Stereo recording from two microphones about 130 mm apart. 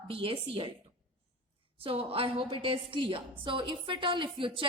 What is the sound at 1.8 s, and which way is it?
A woman's voice, 45° right (ahead or behind).